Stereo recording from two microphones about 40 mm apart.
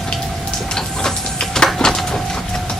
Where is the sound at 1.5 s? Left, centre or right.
Centre.